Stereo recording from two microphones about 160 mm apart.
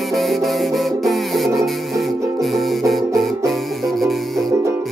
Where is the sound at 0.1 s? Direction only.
Centre (ahead or behind).